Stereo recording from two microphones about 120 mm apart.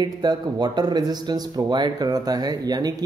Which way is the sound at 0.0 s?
35° right (ahead or behind).